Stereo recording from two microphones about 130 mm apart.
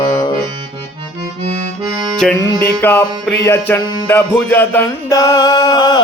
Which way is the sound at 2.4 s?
20° left (ahead or behind).